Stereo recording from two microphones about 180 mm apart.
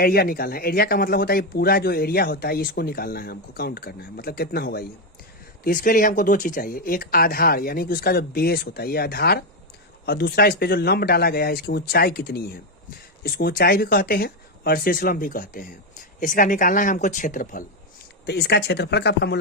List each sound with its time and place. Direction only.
0.0 s speech: 55° left (ahead or behind)
5.6 s speech: 50° left (ahead or behind)
18.3 s speech: 65° left (ahead or behind)